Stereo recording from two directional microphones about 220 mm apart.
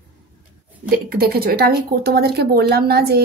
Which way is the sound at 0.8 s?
45° right (ahead or behind).